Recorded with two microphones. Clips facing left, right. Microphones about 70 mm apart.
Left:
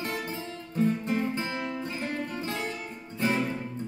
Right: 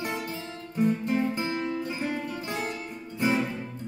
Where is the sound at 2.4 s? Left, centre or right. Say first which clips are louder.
Right 1 dB; centre.